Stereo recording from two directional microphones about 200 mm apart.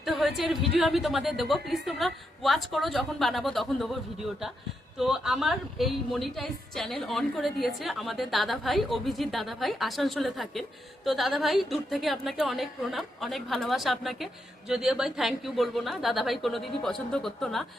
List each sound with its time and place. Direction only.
0.0 s a sound: centre (ahead or behind)
0.8 s a woman's voice: centre (ahead or behind)
4.9 s a woman's voice: centre (ahead or behind)